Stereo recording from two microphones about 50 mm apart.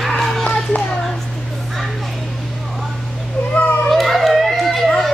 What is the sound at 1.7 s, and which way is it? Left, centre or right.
Children playing, centre.